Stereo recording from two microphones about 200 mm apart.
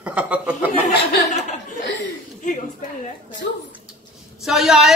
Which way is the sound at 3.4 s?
65° left (ahead or behind).